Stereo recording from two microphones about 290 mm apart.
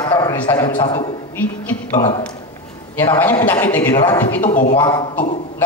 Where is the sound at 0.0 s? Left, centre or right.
Centre.